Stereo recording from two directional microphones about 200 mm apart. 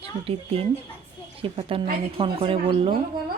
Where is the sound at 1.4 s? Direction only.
25° right (ahead or behind).